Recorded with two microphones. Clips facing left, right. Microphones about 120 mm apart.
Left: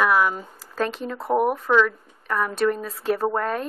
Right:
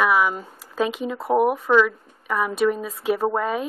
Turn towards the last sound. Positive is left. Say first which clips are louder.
# right 1 dB
turn(degrees=-5)  # may be behind; listen again after turning